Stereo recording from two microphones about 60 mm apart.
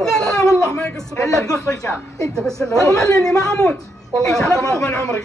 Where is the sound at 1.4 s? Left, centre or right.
Left.